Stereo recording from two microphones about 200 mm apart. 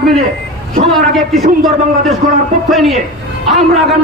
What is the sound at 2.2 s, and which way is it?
Speech, 40° right (ahead or behind).